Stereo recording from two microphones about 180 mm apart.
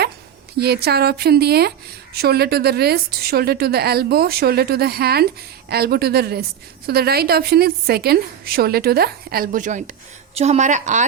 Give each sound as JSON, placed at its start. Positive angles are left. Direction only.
{"t": 0.5, "sound": "a woman's voice", "side_deg": -60}